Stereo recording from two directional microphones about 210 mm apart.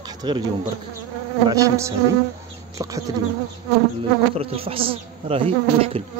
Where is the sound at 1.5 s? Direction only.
15° right (ahead or behind).